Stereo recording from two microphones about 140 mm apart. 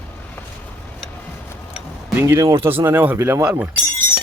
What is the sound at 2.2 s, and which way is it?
Speech, 15° right (ahead or behind).